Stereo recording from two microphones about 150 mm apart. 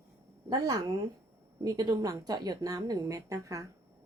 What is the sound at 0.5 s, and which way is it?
Speech, 25° right (ahead or behind).